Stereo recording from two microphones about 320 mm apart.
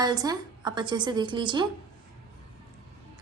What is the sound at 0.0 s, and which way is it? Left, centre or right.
A woman's voice, centre.